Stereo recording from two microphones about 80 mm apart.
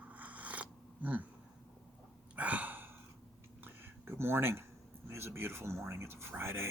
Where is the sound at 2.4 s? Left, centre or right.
Centre.